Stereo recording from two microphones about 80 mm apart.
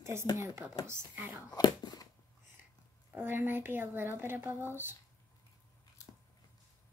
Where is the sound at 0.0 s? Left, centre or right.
Right.